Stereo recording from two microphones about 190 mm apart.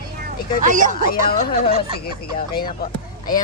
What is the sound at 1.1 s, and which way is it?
Speech, 50° left (ahead or behind).